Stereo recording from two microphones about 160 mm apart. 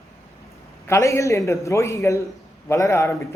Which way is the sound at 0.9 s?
20° left (ahead or behind).